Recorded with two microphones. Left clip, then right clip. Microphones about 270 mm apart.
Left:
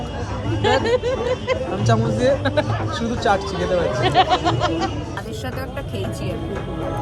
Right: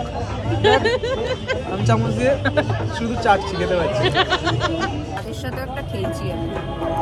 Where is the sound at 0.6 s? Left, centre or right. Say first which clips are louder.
Right 1 dB; centre.